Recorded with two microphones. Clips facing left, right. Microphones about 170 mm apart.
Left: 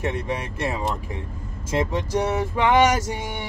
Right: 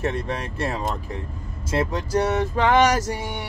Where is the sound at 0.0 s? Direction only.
15° left (ahead or behind).